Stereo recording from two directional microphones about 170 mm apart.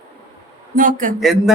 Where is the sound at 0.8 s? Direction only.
50° right (ahead or behind).